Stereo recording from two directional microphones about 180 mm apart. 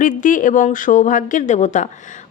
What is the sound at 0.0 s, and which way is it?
A woman's voice, 45° left (ahead or behind).